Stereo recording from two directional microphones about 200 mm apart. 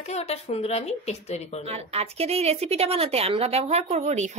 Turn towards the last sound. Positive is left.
turn(degrees=-35)  # may be behind; listen again after turning